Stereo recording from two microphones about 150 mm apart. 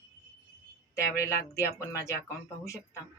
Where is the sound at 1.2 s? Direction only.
20° left (ahead or behind).